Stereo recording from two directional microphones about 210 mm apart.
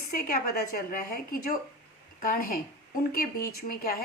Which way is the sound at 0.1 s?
45° left (ahead or behind).